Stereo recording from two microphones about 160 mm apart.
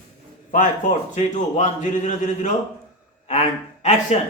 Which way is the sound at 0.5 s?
50° left (ahead or behind).